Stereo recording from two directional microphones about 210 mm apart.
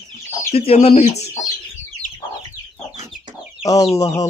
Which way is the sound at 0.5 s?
30° left (ahead or behind).